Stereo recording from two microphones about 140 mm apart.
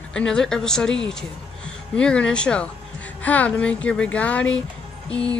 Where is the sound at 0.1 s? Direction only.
5° left (ahead or behind).